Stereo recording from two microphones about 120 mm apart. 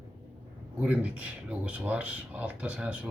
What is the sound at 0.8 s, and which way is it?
Speech, 10° right (ahead or behind).